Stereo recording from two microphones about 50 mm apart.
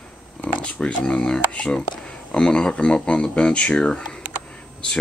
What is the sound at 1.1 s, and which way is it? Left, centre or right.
Speech, centre.